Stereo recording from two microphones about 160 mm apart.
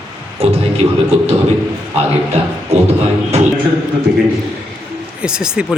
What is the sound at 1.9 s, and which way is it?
Speech, 40° right (ahead or behind).